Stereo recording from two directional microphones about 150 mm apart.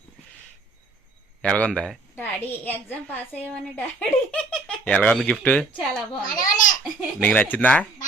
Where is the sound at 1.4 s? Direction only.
5° left (ahead or behind).